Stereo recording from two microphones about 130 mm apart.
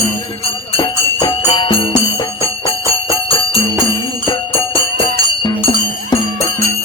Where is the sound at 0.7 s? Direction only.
40° left (ahead or behind).